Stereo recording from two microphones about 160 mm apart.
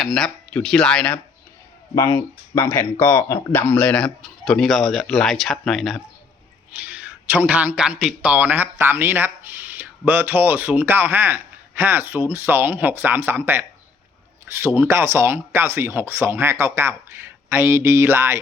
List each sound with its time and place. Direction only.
0.0 s speech: centre (ahead or behind)
2.0 s speech: 15° left (ahead or behind)
6.7 s a man's voice: 10° right (ahead or behind)